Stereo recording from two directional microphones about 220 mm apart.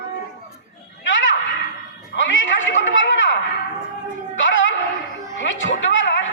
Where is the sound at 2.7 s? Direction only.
60° left (ahead or behind).